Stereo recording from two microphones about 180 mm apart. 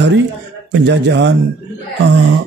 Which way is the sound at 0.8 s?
75° right (ahead or behind).